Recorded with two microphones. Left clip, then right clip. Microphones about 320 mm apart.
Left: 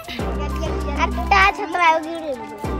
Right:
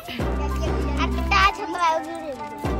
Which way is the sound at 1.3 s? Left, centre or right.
Left.